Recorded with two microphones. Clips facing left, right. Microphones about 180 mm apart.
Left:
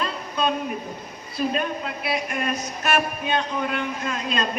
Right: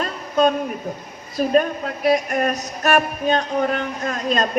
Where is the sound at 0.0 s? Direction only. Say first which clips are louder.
Right 7 dB; 45° right (ahead or behind).